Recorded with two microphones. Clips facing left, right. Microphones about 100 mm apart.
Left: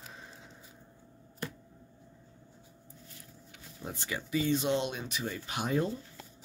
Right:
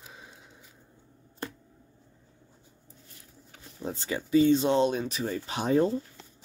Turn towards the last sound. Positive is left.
turn(degrees=-35)  # may be behind; listen again after turning